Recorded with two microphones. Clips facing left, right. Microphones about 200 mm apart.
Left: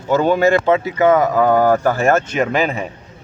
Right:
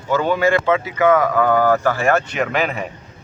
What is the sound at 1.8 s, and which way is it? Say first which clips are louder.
Speech: left 2 dB; 45° left (ahead or behind).